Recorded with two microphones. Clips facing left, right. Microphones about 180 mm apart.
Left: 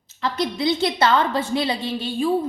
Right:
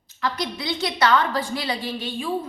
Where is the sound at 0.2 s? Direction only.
25° left (ahead or behind).